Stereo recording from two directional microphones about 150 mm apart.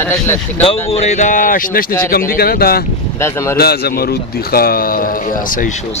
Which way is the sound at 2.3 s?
90° left.